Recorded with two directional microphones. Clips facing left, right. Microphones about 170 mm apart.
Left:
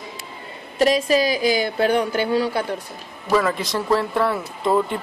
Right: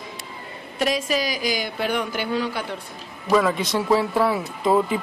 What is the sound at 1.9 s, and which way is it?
Speech, 35° left (ahead or behind).